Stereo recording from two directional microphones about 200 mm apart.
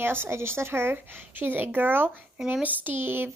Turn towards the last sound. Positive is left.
turn(degrees=-10)  # may be behind; listen again after turning